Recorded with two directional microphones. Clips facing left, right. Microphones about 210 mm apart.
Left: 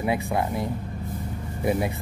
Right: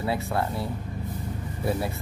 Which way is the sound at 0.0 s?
15° left (ahead or behind).